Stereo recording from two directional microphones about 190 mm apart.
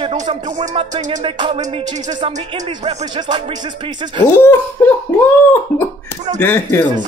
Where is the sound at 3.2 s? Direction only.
25° right (ahead or behind).